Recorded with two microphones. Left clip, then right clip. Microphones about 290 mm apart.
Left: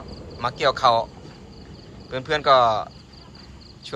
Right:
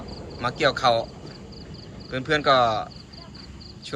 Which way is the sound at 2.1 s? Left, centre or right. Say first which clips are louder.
Left 2 dB; centre.